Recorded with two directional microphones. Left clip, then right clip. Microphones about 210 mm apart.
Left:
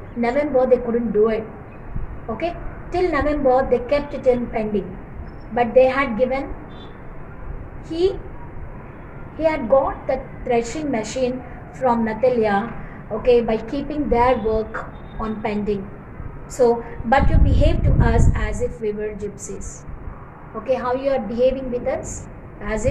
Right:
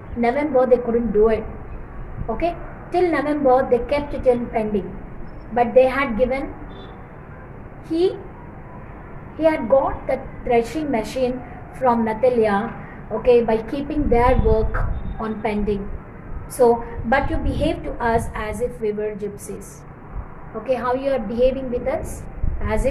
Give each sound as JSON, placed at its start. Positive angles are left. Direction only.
{"t": 0.2, "sound": "a woman's voice", "side_deg": -15}
{"t": 9.4, "sound": "a woman's voice", "side_deg": -15}
{"t": 20.6, "sound": "a woman's voice", "side_deg": -15}